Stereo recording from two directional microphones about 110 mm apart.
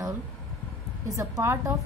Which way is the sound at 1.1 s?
30° right (ahead or behind).